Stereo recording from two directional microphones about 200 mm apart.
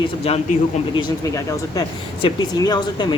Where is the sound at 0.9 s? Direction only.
15° left (ahead or behind).